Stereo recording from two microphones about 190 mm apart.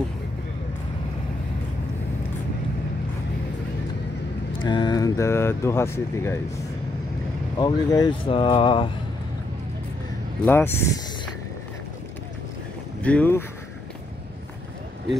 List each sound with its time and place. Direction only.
4.5 s speech: 25° left (ahead or behind)
7.5 s speech: 20° left (ahead or behind)
10.4 s speech: 10° left (ahead or behind)
13.0 s speech: 10° left (ahead or behind)